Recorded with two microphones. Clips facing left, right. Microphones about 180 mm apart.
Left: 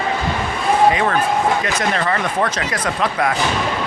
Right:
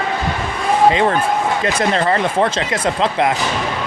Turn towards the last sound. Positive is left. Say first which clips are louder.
# right 3 dB
turn(degrees=-25)  # may be behind; listen again after turning